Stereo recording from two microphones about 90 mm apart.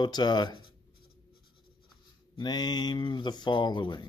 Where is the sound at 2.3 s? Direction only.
55° left (ahead or behind).